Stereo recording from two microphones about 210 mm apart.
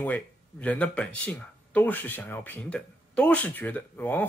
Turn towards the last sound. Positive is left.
turn(degrees=10)  # may be behind; listen again after turning